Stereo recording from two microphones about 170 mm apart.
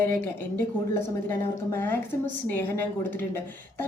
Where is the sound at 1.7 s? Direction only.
15° left (ahead or behind).